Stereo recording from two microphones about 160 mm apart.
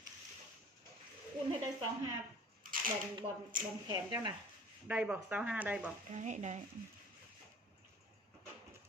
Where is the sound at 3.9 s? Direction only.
25° right (ahead or behind).